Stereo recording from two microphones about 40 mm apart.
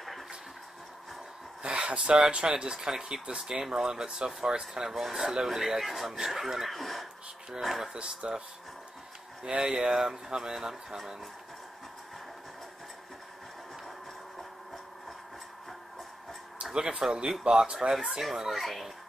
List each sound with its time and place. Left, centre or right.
1.6 s speech: right
4.9 s speech: centre
7.9 s speech: right
9.4 s speech: centre
16.7 s speech: right
17.9 s speech: centre